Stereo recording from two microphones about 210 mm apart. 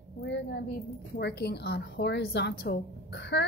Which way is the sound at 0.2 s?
55° left (ahead or behind).